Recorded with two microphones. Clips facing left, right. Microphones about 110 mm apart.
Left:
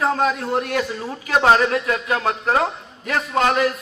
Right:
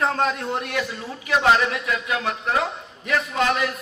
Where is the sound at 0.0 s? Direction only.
5° left (ahead or behind).